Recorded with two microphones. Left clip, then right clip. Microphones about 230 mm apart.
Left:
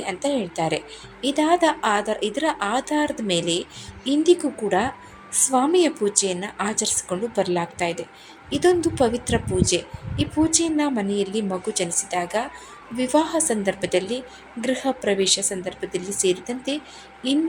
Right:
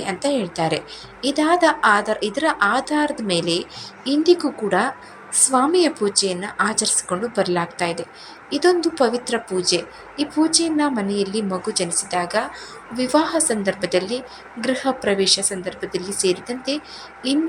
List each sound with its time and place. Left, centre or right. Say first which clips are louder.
0.0 s a woman's voice: right 3 dB; centre
16.0 s speech: right 2 dB; centre
16.2 s a woman's voice: right 2 dB; centre